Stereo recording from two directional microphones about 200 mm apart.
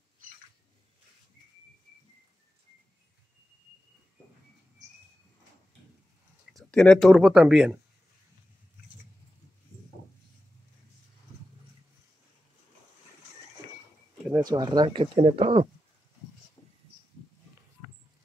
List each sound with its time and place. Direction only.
6.5 s speech: 5° left (ahead or behind)
14.3 s speech: 20° right (ahead or behind)